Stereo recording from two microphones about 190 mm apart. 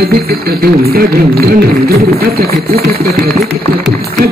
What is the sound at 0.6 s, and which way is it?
Speech, 55° right (ahead or behind).